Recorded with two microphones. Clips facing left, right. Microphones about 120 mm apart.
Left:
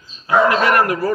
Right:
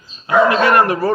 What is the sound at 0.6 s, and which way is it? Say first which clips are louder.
Speech: right 2 dB; 30° right (ahead or behind).